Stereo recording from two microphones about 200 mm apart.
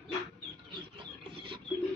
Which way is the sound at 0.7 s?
25° right (ahead or behind).